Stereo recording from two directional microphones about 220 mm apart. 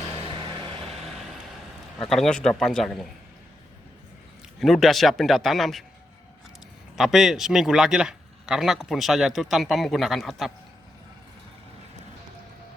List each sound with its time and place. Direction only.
0.1 s vehicle: 25° right (ahead or behind)
2.0 s speech: centre (ahead or behind)
4.6 s speech: centre (ahead or behind)
6.9 s speech: centre (ahead or behind)